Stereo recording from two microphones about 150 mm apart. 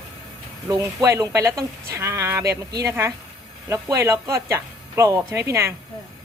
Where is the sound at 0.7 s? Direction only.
20° right (ahead or behind).